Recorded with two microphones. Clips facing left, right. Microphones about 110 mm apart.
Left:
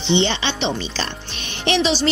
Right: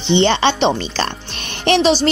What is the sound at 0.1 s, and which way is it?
A woman's voice, 45° right (ahead or behind).